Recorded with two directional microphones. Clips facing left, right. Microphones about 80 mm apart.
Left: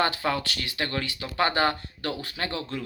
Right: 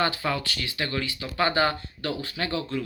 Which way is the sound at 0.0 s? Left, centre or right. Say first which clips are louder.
Left 1 dB; left.